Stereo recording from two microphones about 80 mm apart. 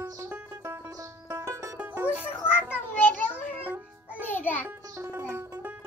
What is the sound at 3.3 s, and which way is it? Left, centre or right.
Music, centre.